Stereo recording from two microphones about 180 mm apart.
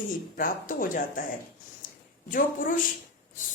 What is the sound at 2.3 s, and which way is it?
Speech, 50° left (ahead or behind).